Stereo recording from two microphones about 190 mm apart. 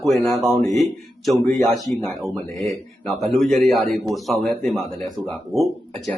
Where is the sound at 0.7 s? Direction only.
Centre (ahead or behind).